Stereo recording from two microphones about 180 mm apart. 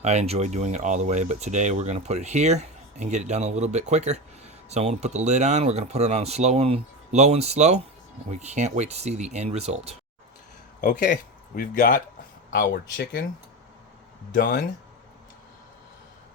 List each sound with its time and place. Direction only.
0.0 s speech: 40° right (ahead or behind)
10.8 s speech: 45° left (ahead or behind)
12.5 s speech: 60° left (ahead or behind)
14.3 s speech: 65° left (ahead or behind)